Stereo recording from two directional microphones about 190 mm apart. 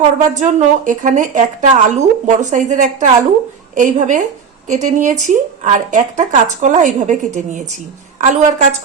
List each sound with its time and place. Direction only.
0.3 s speech: 40° right (ahead or behind)